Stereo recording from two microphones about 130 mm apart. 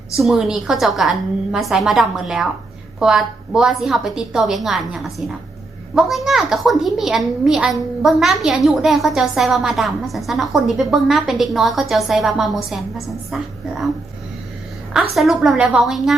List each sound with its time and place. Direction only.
0.2 s a woman's voice: 5° right (ahead or behind)
14.9 s a woman's voice: centre (ahead or behind)